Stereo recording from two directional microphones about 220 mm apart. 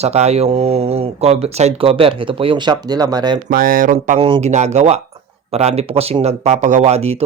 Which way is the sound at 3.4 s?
40° right (ahead or behind).